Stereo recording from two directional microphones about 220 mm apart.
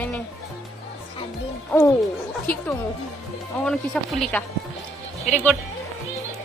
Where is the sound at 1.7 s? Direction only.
5° left (ahead or behind).